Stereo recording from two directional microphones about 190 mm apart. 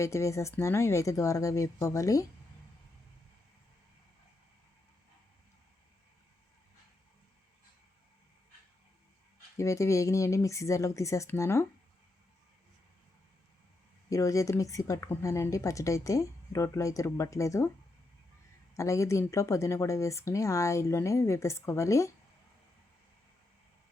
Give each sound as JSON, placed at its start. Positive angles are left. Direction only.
{"t": 0.0, "sound": "a woman's voice", "side_deg": 15}
{"t": 9.6, "sound": "a woman's voice", "side_deg": 15}
{"t": 14.1, "sound": "a woman's voice", "side_deg": 15}
{"t": 18.8, "sound": "a woman's voice", "side_deg": 15}